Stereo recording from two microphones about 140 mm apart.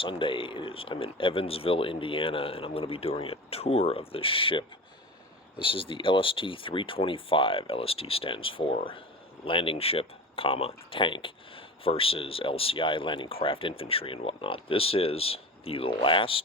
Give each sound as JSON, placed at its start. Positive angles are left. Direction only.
{"t": 0.0, "sound": "speech", "side_deg": 40}